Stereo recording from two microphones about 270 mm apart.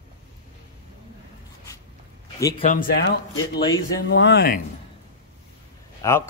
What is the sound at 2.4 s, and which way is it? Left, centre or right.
Speech, centre.